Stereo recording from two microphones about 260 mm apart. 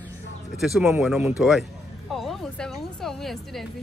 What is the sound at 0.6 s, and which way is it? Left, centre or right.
Speech, centre.